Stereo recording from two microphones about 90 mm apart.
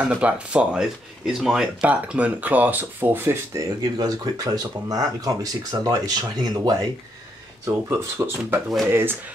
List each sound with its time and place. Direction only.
0.0 s speech: 15° right (ahead or behind)
3.5 s speech: 50° right (ahead or behind)
7.6 s speech: 30° right (ahead or behind)